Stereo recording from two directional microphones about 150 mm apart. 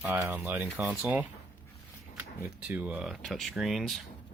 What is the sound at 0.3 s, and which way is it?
Speech, 15° right (ahead or behind).